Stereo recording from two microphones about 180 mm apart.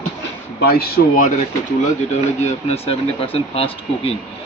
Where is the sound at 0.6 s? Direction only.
60° left (ahead or behind).